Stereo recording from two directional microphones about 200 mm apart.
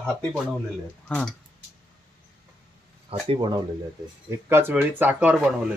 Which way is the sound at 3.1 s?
25° right (ahead or behind).